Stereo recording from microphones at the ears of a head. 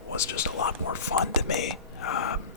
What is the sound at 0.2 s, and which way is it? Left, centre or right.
Speech, left.